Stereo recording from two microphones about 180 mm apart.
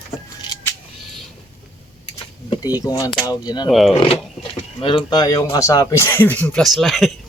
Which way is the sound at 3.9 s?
30° left (ahead or behind).